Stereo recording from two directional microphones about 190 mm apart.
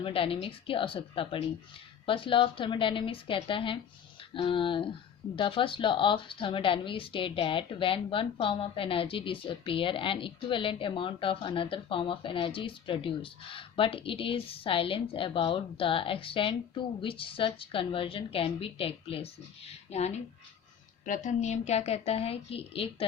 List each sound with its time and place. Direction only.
0.0 s a woman's voice: 30° left (ahead or behind)